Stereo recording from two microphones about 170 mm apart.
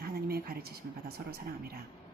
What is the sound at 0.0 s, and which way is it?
Speech, 65° right (ahead or behind).